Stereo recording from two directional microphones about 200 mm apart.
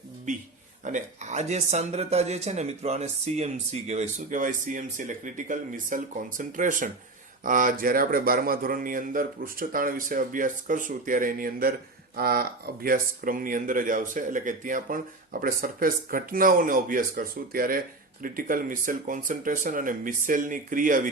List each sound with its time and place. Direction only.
0.3 s speech: 40° right (ahead or behind)